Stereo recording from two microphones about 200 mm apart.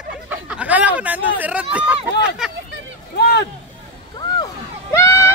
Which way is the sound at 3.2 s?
55° left (ahead or behind).